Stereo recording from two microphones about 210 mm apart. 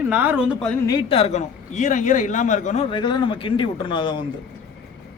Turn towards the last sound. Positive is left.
turn(degrees=20)  # may be behind; listen again after turning